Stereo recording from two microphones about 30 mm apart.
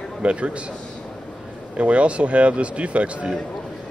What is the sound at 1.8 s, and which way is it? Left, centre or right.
Speech, right.